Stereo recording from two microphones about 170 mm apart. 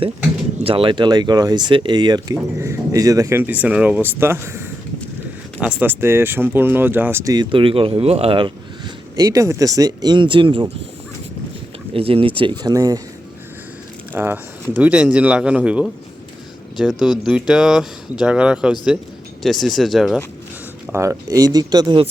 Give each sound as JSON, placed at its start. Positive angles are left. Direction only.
{"t": 0.6, "sound": "speech", "side_deg": -30}
{"t": 11.9, "sound": "speech", "side_deg": -35}
{"t": 14.1, "sound": "speech", "side_deg": -10}
{"t": 20.9, "sound": "speech", "side_deg": -20}